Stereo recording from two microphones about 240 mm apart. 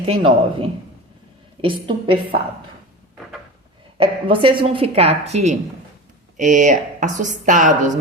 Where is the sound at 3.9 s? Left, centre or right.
Right.